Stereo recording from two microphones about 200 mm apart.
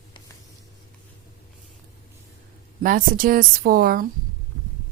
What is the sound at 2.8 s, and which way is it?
Speech, 45° right (ahead or behind).